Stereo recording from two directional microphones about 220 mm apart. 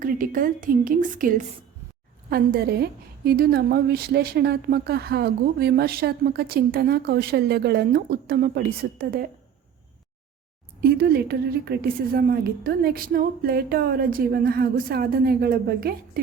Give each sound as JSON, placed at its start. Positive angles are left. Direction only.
{"t": 0.0, "sound": "a woman's voice", "side_deg": -40}
{"t": 10.8, "sound": "a woman's voice", "side_deg": -45}